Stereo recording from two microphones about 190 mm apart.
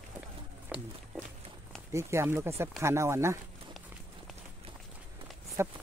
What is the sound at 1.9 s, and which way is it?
Speech, 15° right (ahead or behind).